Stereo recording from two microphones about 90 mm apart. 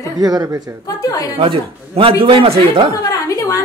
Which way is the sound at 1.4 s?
75° right (ahead or behind).